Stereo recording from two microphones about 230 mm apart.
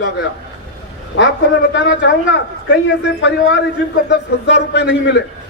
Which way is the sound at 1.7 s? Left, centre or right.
Left.